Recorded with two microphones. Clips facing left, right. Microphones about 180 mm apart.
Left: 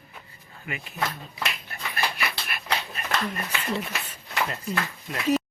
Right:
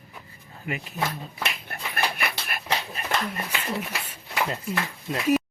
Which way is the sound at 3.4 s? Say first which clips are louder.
Left 1 dB; 10° right (ahead or behind).